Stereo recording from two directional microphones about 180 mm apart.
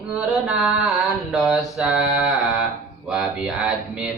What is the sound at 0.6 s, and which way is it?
Mantra, centre (ahead or behind).